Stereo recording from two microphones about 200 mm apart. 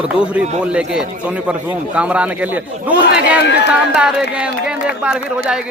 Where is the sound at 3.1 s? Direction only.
55° left (ahead or behind).